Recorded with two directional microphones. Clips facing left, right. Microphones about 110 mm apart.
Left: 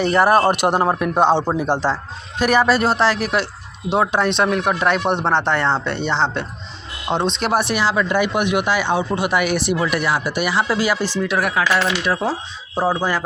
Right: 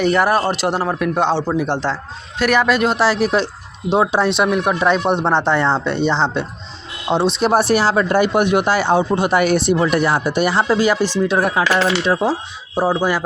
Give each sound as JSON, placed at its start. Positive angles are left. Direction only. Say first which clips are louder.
{"t": 0.0, "sound": "speech", "louder": "even", "side_deg": 0}
{"t": 0.3, "sound": "speech", "louder": "left 2 dB", "side_deg": 50}
{"t": 0.9, "sound": "speech", "louder": "right 1 dB", "side_deg": 5}
{"t": 1.3, "sound": "speech", "louder": "left 2 dB", "side_deg": 20}
{"t": 1.7, "sound": "speech", "louder": "left 1 dB", "side_deg": 10}
{"t": 2.4, "sound": "speech", "louder": "even", "side_deg": 40}
{"t": 3.0, "sound": "speech", "louder": "right 2 dB", "side_deg": -20}
{"t": 7.5, "sound": "speech", "louder": "right 3 dB", "side_deg": -35}
{"t": 12.7, "sound": "speech", "louder": "right 2 dB", "side_deg": -10}